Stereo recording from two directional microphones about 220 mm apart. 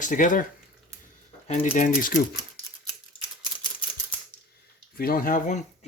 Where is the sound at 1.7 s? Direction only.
40° left (ahead or behind).